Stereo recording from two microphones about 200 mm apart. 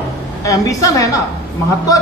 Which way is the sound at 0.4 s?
15° left (ahead or behind).